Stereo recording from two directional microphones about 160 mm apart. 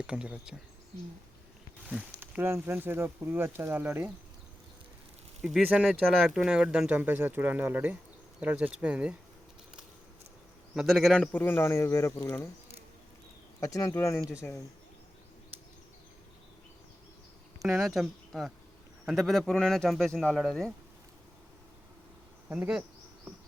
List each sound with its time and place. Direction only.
0.1 s speech: 5° right (ahead or behind)
1.9 s speech: 10° right (ahead or behind)
5.4 s speech: 5° right (ahead or behind)
10.8 s speech: centre (ahead or behind)
13.6 s speech: 20° left (ahead or behind)
17.6 s speech: centre (ahead or behind)
22.4 s speech: 5° right (ahead or behind)